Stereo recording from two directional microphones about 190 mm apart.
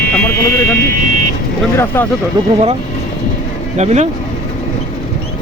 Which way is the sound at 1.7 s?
10° left (ahead or behind).